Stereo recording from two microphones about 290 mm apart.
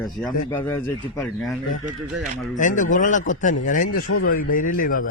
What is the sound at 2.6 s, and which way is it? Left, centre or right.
A man's voice, left.